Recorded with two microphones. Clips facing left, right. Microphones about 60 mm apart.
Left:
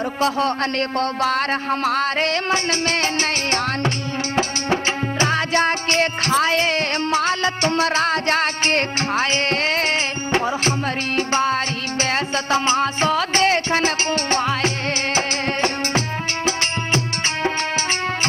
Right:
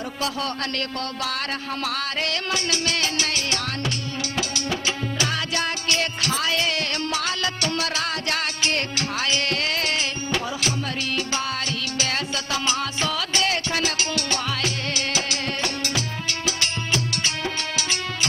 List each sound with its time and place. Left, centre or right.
0.2 s music: left